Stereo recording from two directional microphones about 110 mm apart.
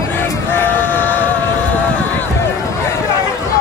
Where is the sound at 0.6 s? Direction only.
15° left (ahead or behind).